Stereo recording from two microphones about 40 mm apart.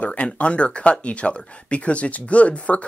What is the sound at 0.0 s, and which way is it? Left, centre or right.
Speech, left.